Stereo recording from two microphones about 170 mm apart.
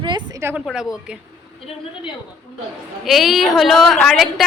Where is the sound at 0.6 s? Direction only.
5° right (ahead or behind).